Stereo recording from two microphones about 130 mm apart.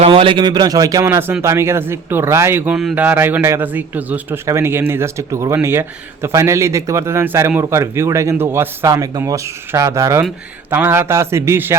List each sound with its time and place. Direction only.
0.0 s a man's voice: 45° right (ahead or behind); by 11.8 s 20° right (ahead or behind)